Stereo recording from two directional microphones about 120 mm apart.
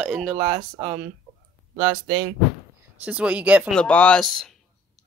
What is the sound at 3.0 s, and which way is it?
Speech, 10° right (ahead or behind).